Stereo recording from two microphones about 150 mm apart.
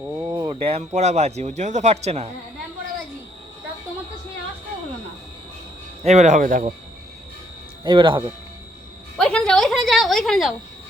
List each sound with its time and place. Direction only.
0.0 s a sound: 20° right (ahead or behind)
0.3 s a man's voice: 35° right (ahead or behind)
6.0 s a man's voice: 50° right (ahead or behind); by 6.7 s 65° right (ahead or behind)
7.9 s speech: 35° right (ahead or behind)
9.1 s a woman's voice: 5° left (ahead or behind)